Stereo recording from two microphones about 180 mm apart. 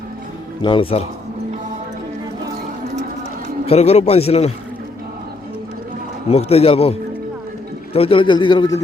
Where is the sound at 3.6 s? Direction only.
35° left (ahead or behind).